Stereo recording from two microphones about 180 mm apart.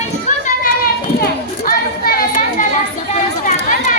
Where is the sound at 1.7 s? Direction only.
55° left (ahead or behind).